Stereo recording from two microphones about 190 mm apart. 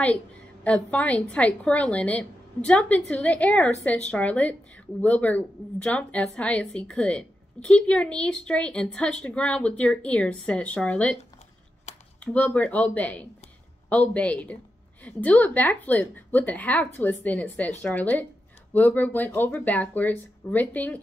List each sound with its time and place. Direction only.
0.7 s a woman's voice: 5° left (ahead or behind)
12.2 s a woman's voice: 5° left (ahead or behind)